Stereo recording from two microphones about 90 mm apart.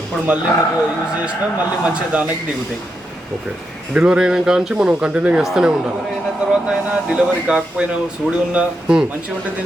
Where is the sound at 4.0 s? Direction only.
10° right (ahead or behind).